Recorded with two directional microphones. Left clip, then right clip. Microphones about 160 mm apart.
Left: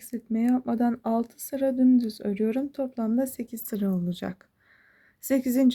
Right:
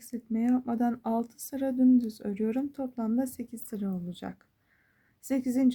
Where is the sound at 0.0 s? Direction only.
25° left (ahead or behind).